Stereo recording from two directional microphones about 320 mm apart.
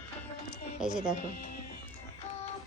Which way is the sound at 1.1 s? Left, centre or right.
Left.